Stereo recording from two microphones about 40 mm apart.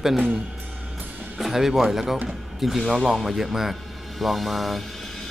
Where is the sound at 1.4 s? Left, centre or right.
Centre.